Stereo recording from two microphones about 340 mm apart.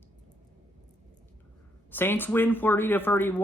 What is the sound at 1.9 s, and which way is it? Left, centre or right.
Speech, centre.